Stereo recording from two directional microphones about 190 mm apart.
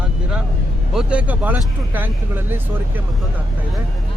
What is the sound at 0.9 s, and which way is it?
Speech, 5° right (ahead or behind).